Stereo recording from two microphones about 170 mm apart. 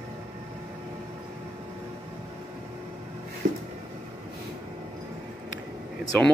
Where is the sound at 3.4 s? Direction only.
50° right (ahead or behind).